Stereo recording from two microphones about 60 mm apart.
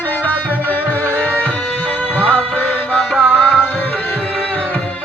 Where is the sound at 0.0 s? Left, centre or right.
Left.